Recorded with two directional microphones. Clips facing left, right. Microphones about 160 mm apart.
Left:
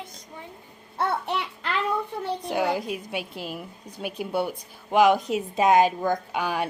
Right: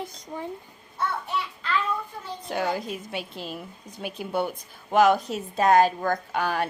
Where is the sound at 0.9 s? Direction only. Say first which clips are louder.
Left 3 dB; 70° left (ahead or behind).